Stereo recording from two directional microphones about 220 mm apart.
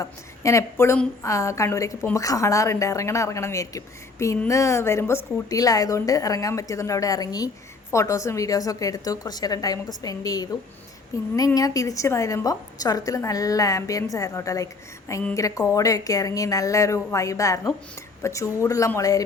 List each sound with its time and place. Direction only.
0.0 s a woman's voice: 15° left (ahead or behind)